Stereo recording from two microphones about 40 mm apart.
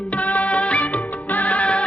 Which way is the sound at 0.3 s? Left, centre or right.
Left.